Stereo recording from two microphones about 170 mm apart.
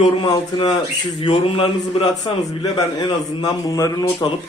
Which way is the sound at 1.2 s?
30° left (ahead or behind).